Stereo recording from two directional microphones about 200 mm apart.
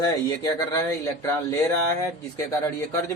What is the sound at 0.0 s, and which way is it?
Speech, 20° left (ahead or behind).